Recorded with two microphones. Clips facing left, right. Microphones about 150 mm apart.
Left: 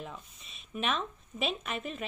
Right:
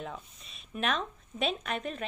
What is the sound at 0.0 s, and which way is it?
Speech, centre (ahead or behind).